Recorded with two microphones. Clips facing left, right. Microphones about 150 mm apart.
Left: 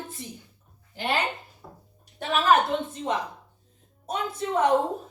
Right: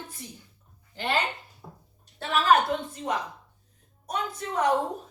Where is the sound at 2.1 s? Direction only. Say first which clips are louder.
Left 1 dB; 20° left (ahead or behind).